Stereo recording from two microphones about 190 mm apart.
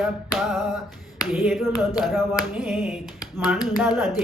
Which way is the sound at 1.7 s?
20° left (ahead or behind).